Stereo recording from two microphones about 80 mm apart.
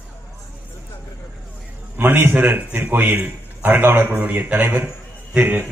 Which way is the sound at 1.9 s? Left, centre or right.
Right.